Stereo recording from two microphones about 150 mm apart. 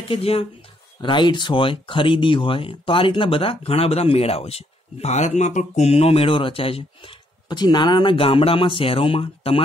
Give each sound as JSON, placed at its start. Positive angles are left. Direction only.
{"t": 0.1, "sound": "speech", "side_deg": 40}